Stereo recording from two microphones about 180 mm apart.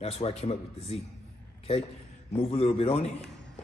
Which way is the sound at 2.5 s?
35° left (ahead or behind).